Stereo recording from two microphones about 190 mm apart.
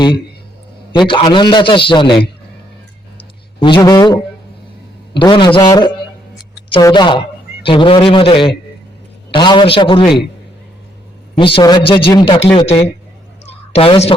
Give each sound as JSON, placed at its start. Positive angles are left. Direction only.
{"t": 0.9, "sound": "a man's voice", "side_deg": 25}
{"t": 3.2, "sound": "a sound", "side_deg": 25}
{"t": 5.1, "sound": "a man's voice", "side_deg": 25}
{"t": 11.3, "sound": "a man's voice", "side_deg": 25}